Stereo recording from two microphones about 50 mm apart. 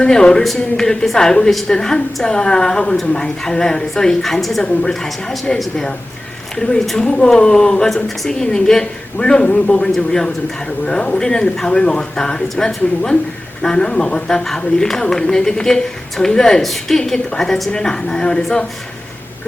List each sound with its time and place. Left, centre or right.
0.0 s a man's voice: centre
1.7 s speech: centre
4.6 s a woman's voice: centre
4.9 s a man's voice: centre